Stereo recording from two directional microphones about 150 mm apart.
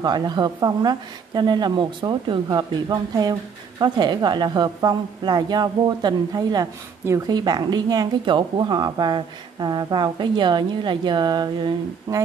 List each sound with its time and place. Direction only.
0.0 s a woman's voice: 30° right (ahead or behind)